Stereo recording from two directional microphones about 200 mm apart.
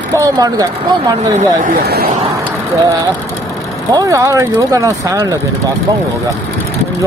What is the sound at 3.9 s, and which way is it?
Speech, 20° right (ahead or behind).